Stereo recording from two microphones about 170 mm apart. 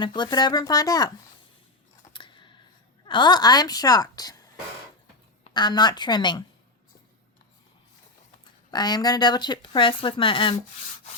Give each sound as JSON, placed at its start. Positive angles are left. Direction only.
{"t": 0.0, "sound": "speech", "side_deg": 25}
{"t": 2.1, "sound": "scissors", "side_deg": 30}
{"t": 3.1, "sound": "speech", "side_deg": 25}
{"t": 5.5, "sound": "speech", "side_deg": 25}
{"t": 8.7, "sound": "speech", "side_deg": 25}